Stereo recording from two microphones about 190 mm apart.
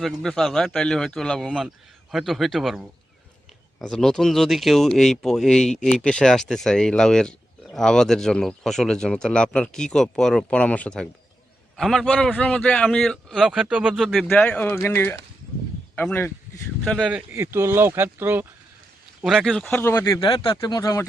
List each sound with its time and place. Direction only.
0.0 s speech: centre (ahead or behind)
17.3 s speech: 15° right (ahead or behind); by 20.1 s 10° left (ahead or behind)
20.2 s speech: 25° left (ahead or behind)